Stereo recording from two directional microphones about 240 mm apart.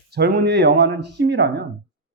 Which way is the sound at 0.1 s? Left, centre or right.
Right.